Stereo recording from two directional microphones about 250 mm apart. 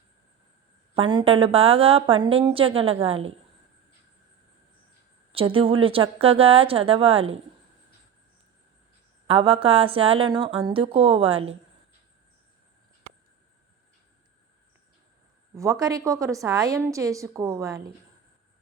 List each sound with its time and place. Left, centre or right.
0.9 s a woman's voice: centre
5.3 s a woman's voice: right
9.2 s a woman's voice: right
15.5 s a woman's voice: centre